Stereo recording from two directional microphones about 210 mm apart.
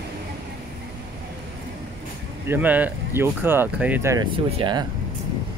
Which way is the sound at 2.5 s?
10° right (ahead or behind).